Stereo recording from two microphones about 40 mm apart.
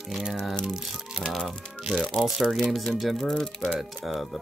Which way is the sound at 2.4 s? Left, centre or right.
Centre.